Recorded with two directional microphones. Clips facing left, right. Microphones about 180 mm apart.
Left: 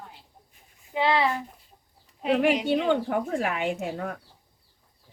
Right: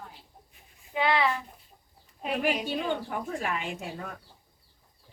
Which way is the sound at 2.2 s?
90° left.